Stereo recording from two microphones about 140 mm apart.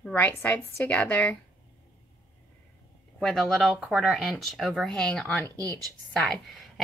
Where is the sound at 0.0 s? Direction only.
15° left (ahead or behind).